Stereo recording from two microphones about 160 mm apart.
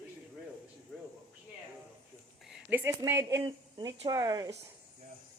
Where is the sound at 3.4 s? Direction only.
30° right (ahead or behind).